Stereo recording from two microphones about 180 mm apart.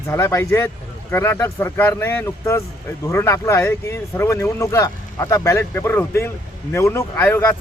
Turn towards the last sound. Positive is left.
turn(degrees=10)  # may be behind; listen again after turning